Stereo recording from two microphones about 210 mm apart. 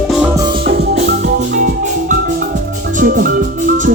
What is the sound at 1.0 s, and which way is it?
Music, 40° right (ahead or behind).